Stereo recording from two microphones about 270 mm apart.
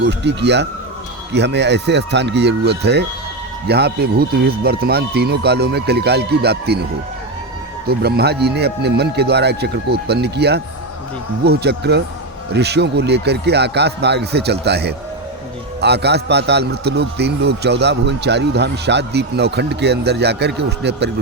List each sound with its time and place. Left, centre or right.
0.0 s a man's voice: right
7.9 s a man's voice: right